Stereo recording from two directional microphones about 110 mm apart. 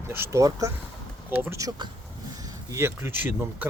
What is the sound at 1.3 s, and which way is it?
Speech, 20° right (ahead or behind).